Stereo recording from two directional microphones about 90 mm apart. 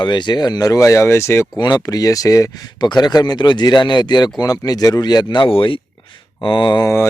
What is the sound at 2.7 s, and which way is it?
Speech, 50° left (ahead or behind).